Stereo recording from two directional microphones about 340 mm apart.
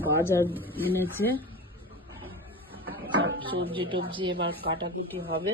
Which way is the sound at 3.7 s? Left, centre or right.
Centre.